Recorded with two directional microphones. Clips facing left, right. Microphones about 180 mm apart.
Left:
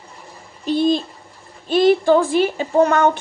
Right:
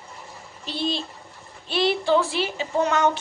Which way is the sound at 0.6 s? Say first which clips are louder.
Left 10 dB; 50° left (ahead or behind).